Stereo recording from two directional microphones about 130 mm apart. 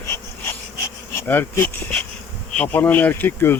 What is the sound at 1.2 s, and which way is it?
Bee, 15° left (ahead or behind).